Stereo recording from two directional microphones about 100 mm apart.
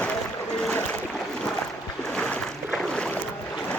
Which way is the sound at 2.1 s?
10° left (ahead or behind).